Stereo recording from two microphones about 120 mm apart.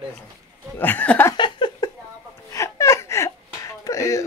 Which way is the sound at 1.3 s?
40° left (ahead or behind).